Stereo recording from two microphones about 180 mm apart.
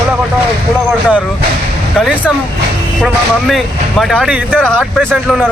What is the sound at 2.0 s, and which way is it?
Speech, 5° right (ahead or behind).